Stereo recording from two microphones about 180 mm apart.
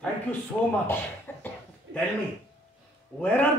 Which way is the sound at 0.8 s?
10° left (ahead or behind).